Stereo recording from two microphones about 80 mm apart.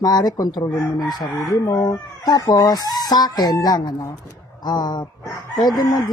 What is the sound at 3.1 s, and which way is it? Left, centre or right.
Speech, left.